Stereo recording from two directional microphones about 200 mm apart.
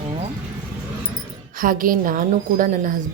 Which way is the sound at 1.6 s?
45° right (ahead or behind).